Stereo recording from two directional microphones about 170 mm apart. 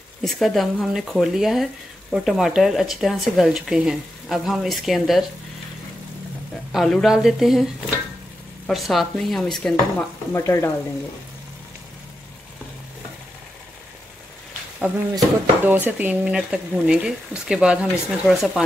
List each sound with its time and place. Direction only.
0.2 s speech: centre (ahead or behind)
6.7 s speech: centre (ahead or behind)
10.3 s stir: 15° left (ahead or behind)
15.1 s speech: 10° right (ahead or behind)